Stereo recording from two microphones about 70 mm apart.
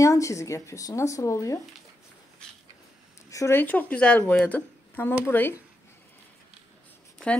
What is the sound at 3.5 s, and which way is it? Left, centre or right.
Speech, left.